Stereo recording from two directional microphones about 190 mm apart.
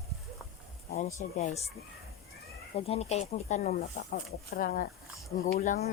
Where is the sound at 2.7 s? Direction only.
35° left (ahead or behind).